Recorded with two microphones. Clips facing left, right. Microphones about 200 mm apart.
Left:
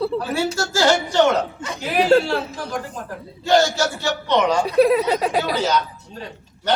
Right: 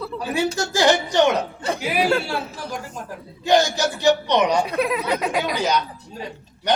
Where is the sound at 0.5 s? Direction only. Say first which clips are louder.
Even; 15° right (ahead or behind).